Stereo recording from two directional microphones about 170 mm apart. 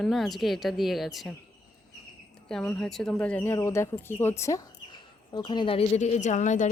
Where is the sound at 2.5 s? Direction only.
5° left (ahead or behind).